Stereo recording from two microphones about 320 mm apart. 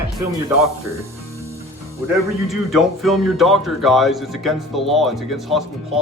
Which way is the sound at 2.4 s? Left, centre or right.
Centre.